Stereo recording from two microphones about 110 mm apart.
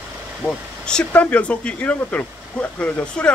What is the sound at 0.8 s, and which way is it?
Speech, 10° left (ahead or behind).